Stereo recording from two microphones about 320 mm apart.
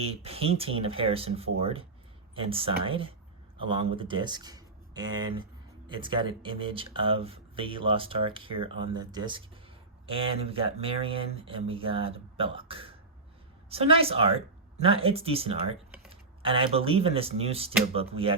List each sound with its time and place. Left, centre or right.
0.0 s speech: centre